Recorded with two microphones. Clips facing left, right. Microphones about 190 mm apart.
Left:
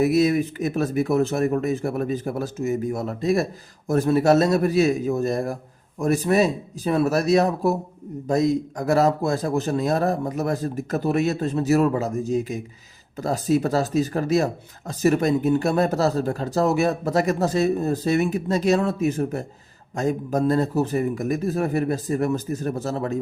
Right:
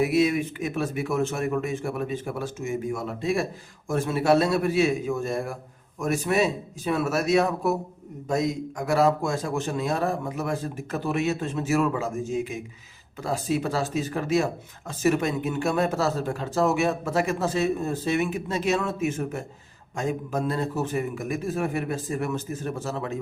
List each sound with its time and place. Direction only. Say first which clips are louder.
0.0 s speech: left 3 dB; 40° left (ahead or behind)